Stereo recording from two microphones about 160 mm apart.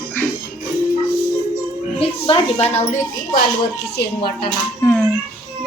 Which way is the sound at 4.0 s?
75° left (ahead or behind).